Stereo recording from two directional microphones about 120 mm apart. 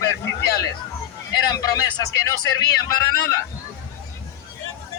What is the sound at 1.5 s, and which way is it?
Speech, 30° left (ahead or behind).